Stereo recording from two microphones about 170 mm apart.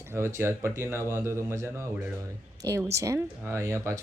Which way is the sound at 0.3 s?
15° right (ahead or behind).